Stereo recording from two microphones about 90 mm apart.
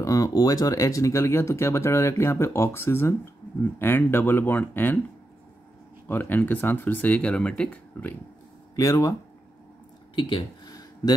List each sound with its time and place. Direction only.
0.0 s speech: 40° left (ahead or behind); by 5.0 s 20° left (ahead or behind)
6.0 s speech: 20° left (ahead or behind)
8.7 s speech: 35° left (ahead or behind)
10.1 s speech: 65° left (ahead or behind)
10.7 s a sound: 50° left (ahead or behind)